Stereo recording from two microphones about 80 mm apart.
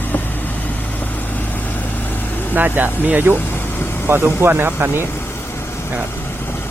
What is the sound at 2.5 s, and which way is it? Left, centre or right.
Speech, right.